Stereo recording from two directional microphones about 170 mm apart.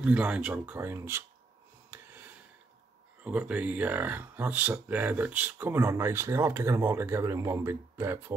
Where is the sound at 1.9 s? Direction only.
15° right (ahead or behind).